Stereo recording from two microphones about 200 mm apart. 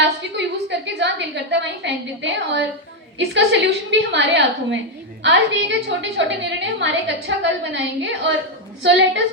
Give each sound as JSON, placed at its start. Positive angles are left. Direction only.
{"t": 0.3, "sound": "a woman's voice", "side_deg": -60}